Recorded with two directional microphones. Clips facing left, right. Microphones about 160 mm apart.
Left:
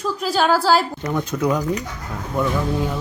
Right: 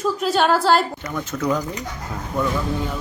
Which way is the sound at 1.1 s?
15° left (ahead or behind).